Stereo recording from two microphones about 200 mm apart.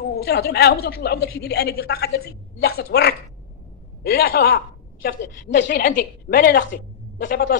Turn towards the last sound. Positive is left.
turn(degrees=65)  # may be behind; listen again after turning